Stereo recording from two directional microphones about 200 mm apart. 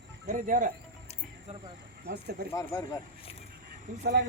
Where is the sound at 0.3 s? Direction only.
40° right (ahead or behind).